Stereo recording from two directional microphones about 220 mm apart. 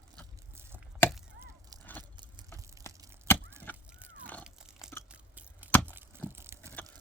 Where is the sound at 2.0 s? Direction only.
20° right (ahead or behind).